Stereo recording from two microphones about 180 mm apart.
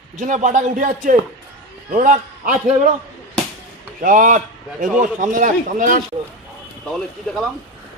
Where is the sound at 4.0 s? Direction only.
45° right (ahead or behind).